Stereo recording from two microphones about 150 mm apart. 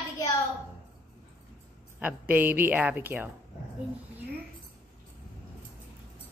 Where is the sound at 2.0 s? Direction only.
10° right (ahead or behind).